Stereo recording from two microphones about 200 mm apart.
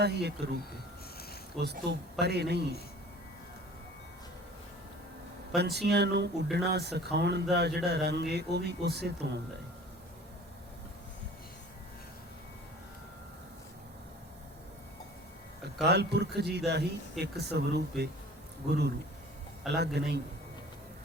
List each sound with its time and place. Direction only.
0.0 s speech: 55° right (ahead or behind)
1.6 s speech: 55° right (ahead or behind)
5.5 s speech: 55° right (ahead or behind)
15.8 s speech: 55° right (ahead or behind)